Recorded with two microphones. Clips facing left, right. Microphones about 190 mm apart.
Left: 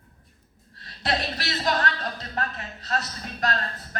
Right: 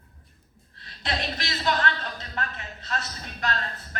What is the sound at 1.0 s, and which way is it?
Speech, 35° left (ahead or behind).